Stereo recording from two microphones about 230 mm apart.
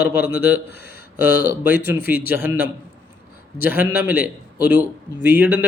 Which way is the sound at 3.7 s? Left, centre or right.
Centre.